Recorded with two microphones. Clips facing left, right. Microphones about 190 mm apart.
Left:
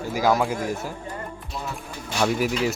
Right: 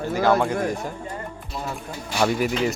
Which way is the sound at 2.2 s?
Centre (ahead or behind).